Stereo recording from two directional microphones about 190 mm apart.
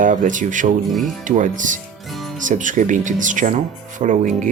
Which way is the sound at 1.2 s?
40° right (ahead or behind).